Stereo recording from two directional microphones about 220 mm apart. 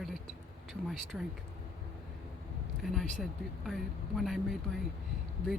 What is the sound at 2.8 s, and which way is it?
Speech, centre (ahead or behind).